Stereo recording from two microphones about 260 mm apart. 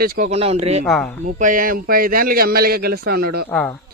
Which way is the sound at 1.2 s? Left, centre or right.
Right.